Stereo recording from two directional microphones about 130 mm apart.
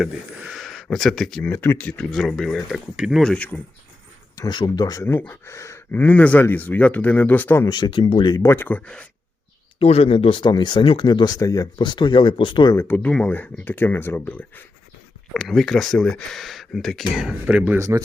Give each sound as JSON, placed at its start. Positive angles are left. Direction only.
{"t": 0.0, "sound": "speech", "side_deg": 0}
{"t": 1.5, "sound": "speech", "side_deg": 15}
{"t": 4.4, "sound": "speech", "side_deg": 35}
{"t": 7.7, "sound": "speech", "side_deg": 40}
{"t": 8.4, "sound": "speech", "side_deg": 20}
{"t": 9.7, "sound": "speech", "side_deg": 50}
{"t": 12.7, "sound": "speech", "side_deg": 15}
{"t": 15.3, "sound": "speech", "side_deg": 0}
{"t": 17.7, "sound": "speech", "side_deg": -25}